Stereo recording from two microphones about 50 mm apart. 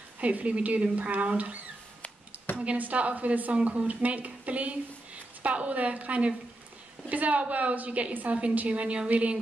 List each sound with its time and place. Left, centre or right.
0.2 s a woman's voice: right